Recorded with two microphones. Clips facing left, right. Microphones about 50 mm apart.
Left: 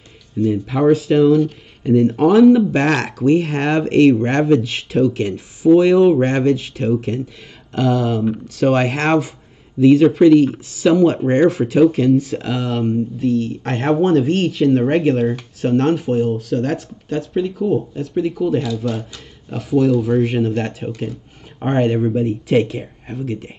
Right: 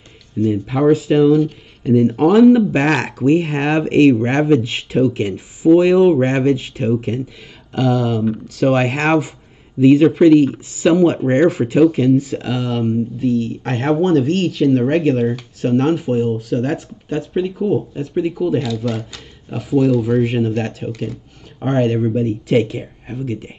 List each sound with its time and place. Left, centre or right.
0.5 s speech: centre
7.7 s speech: centre
18.9 s speech: right
19.5 s speech: centre